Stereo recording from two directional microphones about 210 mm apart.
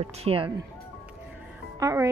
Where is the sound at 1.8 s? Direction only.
15° right (ahead or behind).